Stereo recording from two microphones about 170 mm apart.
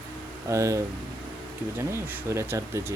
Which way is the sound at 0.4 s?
20° right (ahead or behind).